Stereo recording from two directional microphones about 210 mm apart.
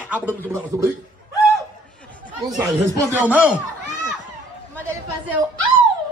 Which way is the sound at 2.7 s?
10° right (ahead or behind).